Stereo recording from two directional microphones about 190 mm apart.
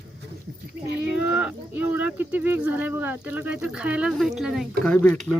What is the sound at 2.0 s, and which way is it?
Speech, 10° right (ahead or behind).